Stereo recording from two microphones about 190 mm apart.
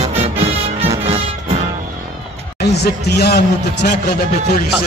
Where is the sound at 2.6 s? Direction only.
60° left (ahead or behind).